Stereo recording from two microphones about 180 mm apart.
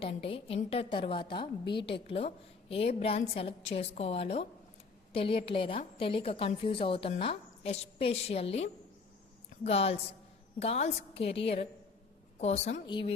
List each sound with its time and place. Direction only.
0.0 s a woman's voice: 30° left (ahead or behind)
12.8 s speech: 25° left (ahead or behind)